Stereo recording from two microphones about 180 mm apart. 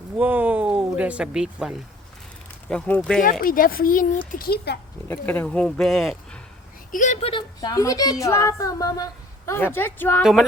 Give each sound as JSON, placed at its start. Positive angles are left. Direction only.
{"t": 0.2, "sound": "speech", "side_deg": -10}
{"t": 2.6, "sound": "speech", "side_deg": 5}
{"t": 3.4, "sound": "speech", "side_deg": 50}
{"t": 5.0, "sound": "speech", "side_deg": 10}
{"t": 6.9, "sound": "speech", "side_deg": 45}